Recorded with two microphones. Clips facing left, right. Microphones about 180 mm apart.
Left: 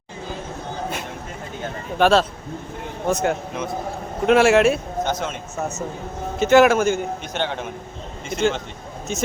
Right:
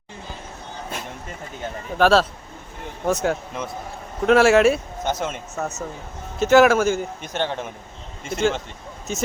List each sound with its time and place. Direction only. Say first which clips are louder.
2.0 s a man's voice: even; centre (ahead or behind)